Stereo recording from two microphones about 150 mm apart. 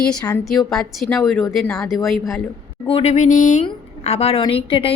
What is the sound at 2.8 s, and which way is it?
Speech, 40° left (ahead or behind).